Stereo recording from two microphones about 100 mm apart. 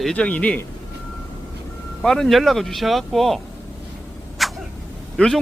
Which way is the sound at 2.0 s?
5° left (ahead or behind).